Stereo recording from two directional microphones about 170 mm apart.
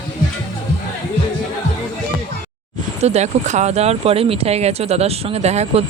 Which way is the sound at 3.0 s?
40° right (ahead or behind).